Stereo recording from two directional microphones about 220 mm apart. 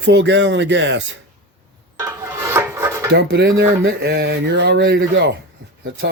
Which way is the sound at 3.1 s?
50° right (ahead or behind).